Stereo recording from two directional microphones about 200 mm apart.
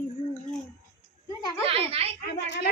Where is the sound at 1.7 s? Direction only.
30° right (ahead or behind).